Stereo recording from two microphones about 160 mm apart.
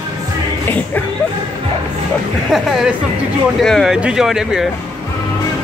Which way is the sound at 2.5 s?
Centre (ahead or behind).